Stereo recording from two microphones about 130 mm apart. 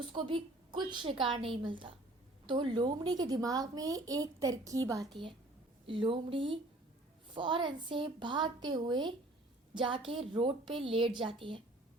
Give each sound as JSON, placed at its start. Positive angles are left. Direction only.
{"t": 0.1, "sound": "a woman's voice", "side_deg": -40}
{"t": 5.8, "sound": "a woman's voice", "side_deg": -45}